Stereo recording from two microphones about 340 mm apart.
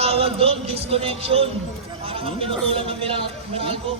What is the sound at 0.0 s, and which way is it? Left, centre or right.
A man's voice, centre.